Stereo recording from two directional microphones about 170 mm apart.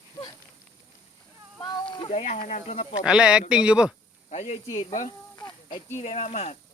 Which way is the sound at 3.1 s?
5° right (ahead or behind).